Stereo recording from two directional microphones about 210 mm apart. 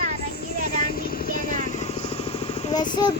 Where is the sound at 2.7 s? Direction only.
20° left (ahead or behind).